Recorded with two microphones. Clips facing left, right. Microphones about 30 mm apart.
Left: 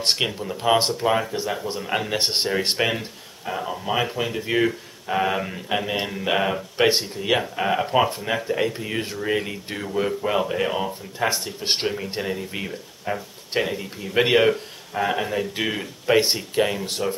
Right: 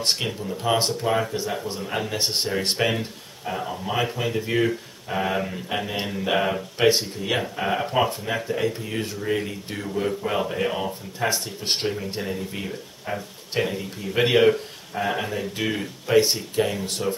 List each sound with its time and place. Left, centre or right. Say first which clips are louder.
0.0 s speech: left 2 dB; left